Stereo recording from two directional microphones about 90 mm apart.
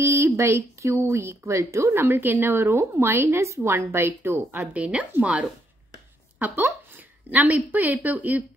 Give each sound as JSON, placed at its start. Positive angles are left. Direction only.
{"t": 0.0, "sound": "speech", "side_deg": -30}
{"t": 1.9, "sound": "a woman's voice", "side_deg": -25}
{"t": 4.7, "sound": "a woman's voice", "side_deg": -15}